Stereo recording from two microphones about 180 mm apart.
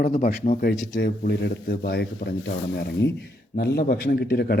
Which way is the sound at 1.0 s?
70° left (ahead or behind).